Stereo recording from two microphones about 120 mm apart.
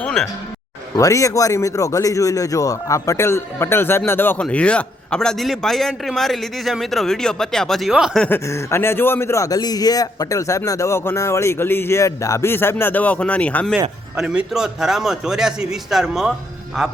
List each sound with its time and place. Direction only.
0.0 s a man's voice: 5° left (ahead or behind)
0.9 s speech: 25° left (ahead or behind); by 8.2 s 5° right (ahead or behind)
8.4 s speech: 20° left (ahead or behind)
14.2 s a man's voice: 5° right (ahead or behind)